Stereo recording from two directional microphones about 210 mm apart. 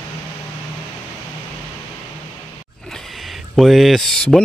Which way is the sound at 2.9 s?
Centre (ahead or behind).